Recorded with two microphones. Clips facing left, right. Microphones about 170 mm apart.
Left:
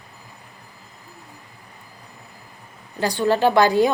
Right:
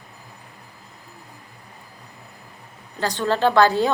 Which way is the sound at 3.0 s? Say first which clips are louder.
Left 2 dB; 10° left (ahead or behind).